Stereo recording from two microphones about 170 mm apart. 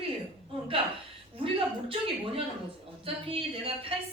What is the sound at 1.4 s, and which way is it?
A woman's voice, 30° right (ahead or behind).